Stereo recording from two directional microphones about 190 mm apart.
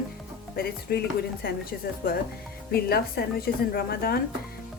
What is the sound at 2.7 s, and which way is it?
A woman's voice, 55° left (ahead or behind).